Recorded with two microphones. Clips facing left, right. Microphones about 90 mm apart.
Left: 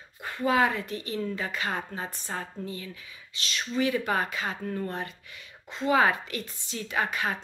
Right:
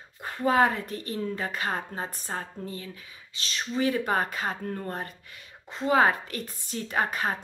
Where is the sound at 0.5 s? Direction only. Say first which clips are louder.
Right 2 dB; 45° right (ahead or behind).